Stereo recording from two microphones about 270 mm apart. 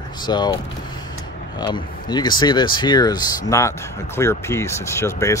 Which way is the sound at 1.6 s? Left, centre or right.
Centre.